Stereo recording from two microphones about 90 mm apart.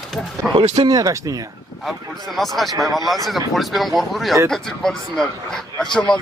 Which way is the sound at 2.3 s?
Centre (ahead or behind).